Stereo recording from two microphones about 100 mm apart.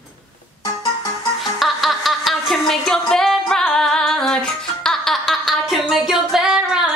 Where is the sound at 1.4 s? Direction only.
Centre (ahead or behind).